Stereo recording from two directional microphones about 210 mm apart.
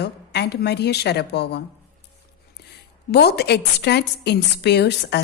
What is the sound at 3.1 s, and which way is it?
A woman's voice, 50° left (ahead or behind).